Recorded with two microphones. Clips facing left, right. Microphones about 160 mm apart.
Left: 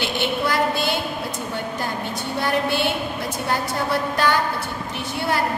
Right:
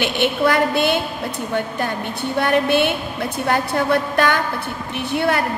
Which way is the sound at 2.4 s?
60° right (ahead or behind).